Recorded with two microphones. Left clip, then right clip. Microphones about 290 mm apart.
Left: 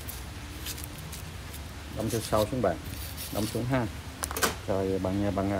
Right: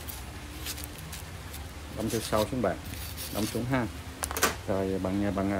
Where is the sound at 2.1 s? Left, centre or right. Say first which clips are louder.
Left 1 dB; centre.